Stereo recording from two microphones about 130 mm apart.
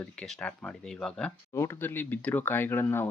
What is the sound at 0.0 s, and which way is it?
Speech, 5° left (ahead or behind).